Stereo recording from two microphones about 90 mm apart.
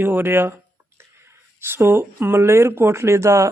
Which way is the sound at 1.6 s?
25° right (ahead or behind).